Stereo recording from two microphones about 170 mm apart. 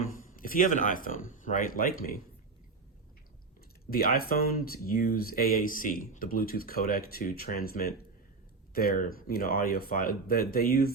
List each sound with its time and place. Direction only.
0.4 s speech: 50° left (ahead or behind)
3.8 s speech: 60° left (ahead or behind)